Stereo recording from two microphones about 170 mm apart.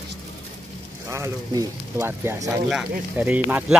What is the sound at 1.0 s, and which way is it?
Speech, 15° right (ahead or behind).